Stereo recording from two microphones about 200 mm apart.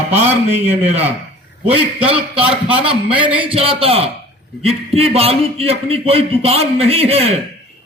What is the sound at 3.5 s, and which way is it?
A man's voice, 30° right (ahead or behind).